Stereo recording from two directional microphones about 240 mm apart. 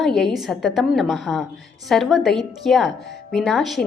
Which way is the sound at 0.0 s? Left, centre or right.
Centre.